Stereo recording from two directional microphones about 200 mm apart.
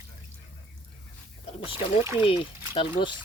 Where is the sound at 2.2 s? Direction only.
25° left (ahead or behind).